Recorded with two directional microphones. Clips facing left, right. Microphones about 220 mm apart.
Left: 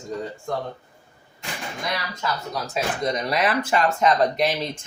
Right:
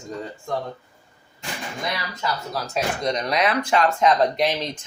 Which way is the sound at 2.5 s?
5° left (ahead or behind).